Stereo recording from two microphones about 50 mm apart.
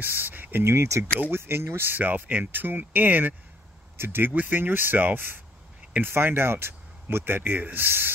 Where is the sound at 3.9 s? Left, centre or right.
Right.